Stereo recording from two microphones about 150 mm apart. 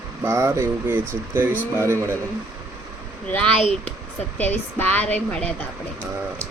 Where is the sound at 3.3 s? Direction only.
5° left (ahead or behind).